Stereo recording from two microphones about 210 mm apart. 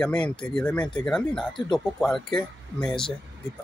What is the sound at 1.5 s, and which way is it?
Speech, 20° left (ahead or behind).